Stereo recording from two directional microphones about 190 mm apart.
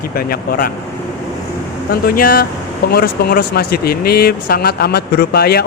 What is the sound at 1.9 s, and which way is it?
Speech, 55° left (ahead or behind).